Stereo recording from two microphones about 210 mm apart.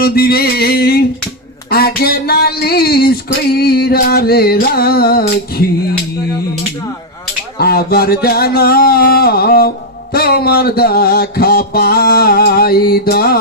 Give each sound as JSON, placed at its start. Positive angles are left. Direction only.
{"t": 0.0, "sound": "music", "side_deg": 50}
{"t": 7.6, "sound": "music", "side_deg": 45}